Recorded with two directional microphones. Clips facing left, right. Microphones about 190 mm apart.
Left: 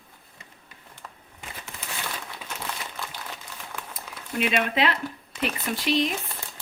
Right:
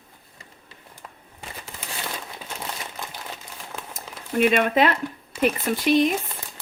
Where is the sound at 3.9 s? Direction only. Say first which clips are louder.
Right 7 dB; 45° right (ahead or behind).